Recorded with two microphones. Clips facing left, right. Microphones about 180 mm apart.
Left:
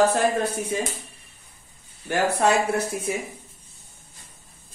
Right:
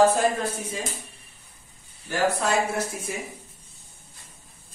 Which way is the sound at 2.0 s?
65° left (ahead or behind).